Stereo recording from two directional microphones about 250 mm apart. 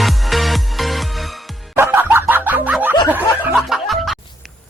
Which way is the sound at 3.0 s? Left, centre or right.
Centre.